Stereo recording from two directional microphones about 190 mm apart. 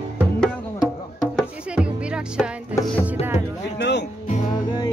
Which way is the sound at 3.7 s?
65° left (ahead or behind).